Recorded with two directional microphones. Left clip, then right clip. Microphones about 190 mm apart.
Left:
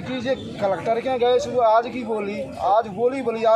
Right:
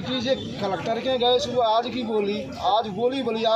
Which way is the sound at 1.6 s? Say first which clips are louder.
Left 6 dB; 10° left (ahead or behind).